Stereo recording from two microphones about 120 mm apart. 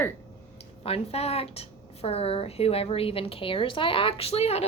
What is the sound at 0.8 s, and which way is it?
A woman's voice, 55° left (ahead or behind).